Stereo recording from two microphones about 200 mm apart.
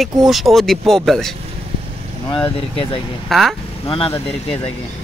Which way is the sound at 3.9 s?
30° left (ahead or behind).